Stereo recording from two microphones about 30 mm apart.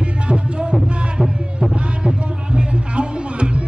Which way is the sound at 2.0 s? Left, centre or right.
Right.